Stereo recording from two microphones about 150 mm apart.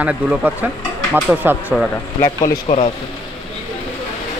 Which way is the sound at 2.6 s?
40° left (ahead or behind).